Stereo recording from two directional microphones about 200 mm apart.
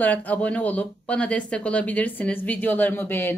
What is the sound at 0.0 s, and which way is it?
A woman's voice, 10° left (ahead or behind).